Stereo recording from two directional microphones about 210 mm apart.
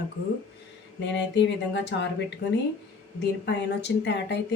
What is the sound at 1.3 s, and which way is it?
Speech, 55° left (ahead or behind).